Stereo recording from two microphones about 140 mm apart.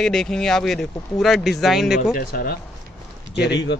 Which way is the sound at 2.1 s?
90° left.